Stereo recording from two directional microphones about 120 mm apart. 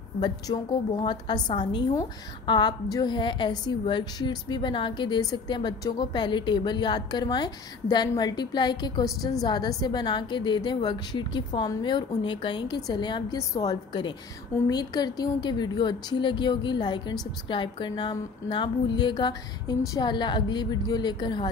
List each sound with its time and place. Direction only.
0.2 s a woman's voice: 40° left (ahead or behind)